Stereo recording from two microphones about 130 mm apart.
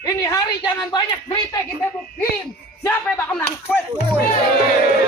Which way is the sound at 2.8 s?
15° left (ahead or behind).